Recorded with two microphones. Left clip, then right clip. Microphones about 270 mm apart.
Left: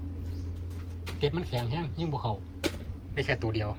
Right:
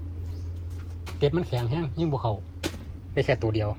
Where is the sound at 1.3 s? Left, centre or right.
Centre.